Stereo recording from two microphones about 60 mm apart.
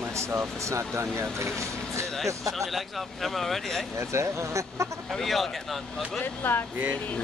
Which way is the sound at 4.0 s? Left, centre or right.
Right.